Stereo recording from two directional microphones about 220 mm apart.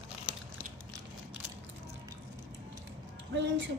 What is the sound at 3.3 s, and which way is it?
Speech, 55° right (ahead or behind).